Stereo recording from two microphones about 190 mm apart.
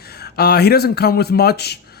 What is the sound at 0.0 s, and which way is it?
Speech, 55° left (ahead or behind).